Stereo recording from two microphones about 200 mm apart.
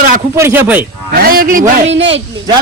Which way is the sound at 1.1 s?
50° right (ahead or behind).